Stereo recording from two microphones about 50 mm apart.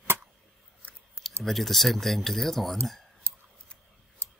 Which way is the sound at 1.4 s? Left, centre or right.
Centre.